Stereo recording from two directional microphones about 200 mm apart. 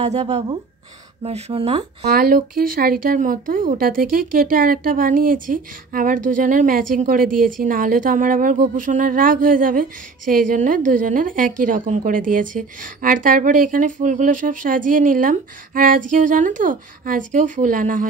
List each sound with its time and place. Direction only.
0.0 s speech: 35° right (ahead or behind)
2.0 s speech: 45° right (ahead or behind)